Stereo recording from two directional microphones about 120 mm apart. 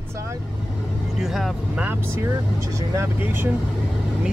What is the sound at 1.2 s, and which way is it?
Speech, 5° right (ahead or behind).